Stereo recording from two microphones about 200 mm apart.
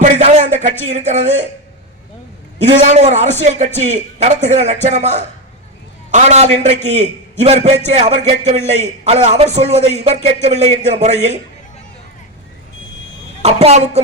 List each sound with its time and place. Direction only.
0.0 s a man's voice: 35° right (ahead or behind)
2.6 s a man's voice: 35° right (ahead or behind)
13.4 s a man's voice: 30° right (ahead or behind)